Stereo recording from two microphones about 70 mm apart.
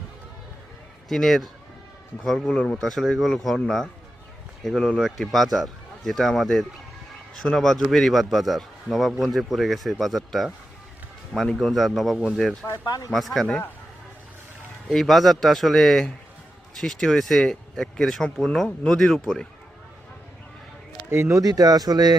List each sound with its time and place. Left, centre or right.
1.0 s speech: centre
2.5 s speech: centre
4.6 s speech: centre
11.6 s speech: centre
12.8 s speech: left
13.1 s speech: centre
14.8 s speech: centre
21.1 s speech: right
21.4 s speech: right